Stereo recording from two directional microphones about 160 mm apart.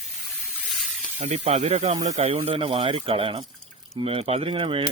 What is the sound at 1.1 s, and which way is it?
Speech, 40° right (ahead or behind).